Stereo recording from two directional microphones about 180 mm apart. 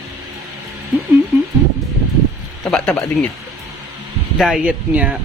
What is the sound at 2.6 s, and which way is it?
Speech, 5° left (ahead or behind).